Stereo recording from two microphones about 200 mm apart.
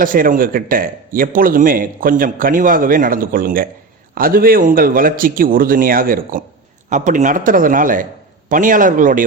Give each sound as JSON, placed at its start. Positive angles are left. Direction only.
{"t": 0.0, "sound": "a man's voice", "side_deg": -45}